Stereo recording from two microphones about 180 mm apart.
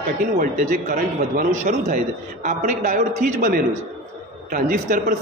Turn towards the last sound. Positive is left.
turn(degrees=-45)  # may be behind; listen again after turning